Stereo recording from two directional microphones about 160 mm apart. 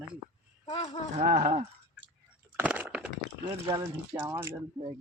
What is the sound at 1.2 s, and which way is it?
Speech, 50° right (ahead or behind).